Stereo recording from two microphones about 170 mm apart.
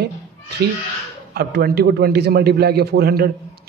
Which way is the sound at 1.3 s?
65° right (ahead or behind).